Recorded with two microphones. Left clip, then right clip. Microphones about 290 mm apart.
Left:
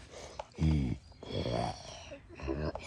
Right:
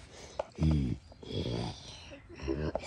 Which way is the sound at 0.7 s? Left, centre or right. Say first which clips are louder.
Right 1 dB; left.